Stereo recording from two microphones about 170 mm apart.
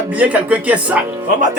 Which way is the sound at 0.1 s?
10° right (ahead or behind).